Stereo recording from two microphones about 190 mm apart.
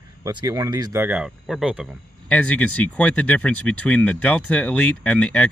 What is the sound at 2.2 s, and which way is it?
Speech, 5° left (ahead or behind).